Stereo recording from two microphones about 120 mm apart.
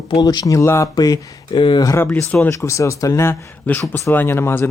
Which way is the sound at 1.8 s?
20° left (ahead or behind).